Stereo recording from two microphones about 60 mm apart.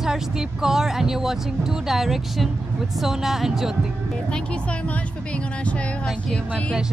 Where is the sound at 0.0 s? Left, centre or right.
Centre.